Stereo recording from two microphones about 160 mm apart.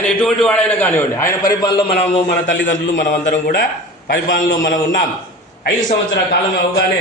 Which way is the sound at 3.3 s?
65° left (ahead or behind).